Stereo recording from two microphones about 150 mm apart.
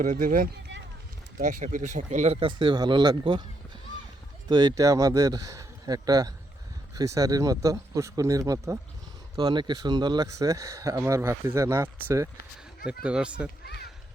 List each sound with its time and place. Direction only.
0.0 s speech: 65° right (ahead or behind)
1.6 s speech: 55° right (ahead or behind)
2.5 s speech: 30° right (ahead or behind)
4.4 s speech: 30° right (ahead or behind)
9.4 s speech: 30° right (ahead or behind); by 13.5 s 5° right (ahead or behind)